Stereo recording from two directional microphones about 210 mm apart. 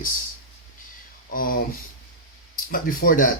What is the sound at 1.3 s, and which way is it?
Speech, 45° left (ahead or behind).